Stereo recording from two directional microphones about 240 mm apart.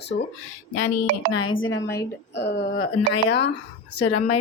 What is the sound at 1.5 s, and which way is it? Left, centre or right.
A woman's voice, left.